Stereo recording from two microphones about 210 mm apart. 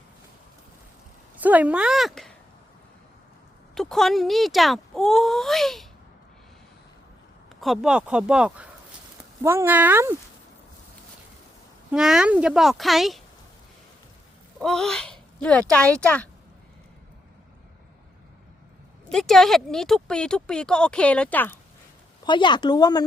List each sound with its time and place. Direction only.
1.4 s speech: 5° right (ahead or behind)
3.8 s speech: centre (ahead or behind)
7.6 s speech: centre (ahead or behind)
11.9 s speech: 5° right (ahead or behind)
14.6 s speech: centre (ahead or behind)
19.0 s speech: centre (ahead or behind)
22.3 s speech: 20° left (ahead or behind)